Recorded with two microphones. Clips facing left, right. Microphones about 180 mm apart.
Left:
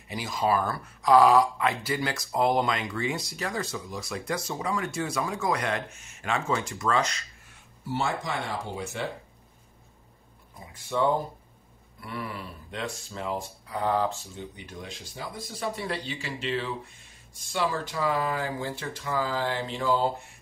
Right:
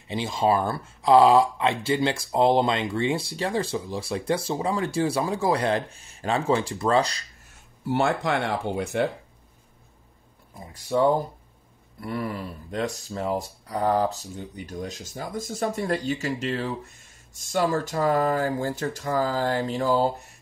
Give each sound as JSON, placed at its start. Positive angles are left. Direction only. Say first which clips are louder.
{"t": 0.1, "sound": "speech", "louder": "right 4 dB", "side_deg": -25}
{"t": 7.9, "sound": "speech", "louder": "right 6 dB", "side_deg": -65}
{"t": 10.7, "sound": "speech", "louder": "right 4 dB", "side_deg": -40}